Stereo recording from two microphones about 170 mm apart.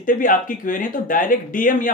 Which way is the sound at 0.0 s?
55° left (ahead or behind).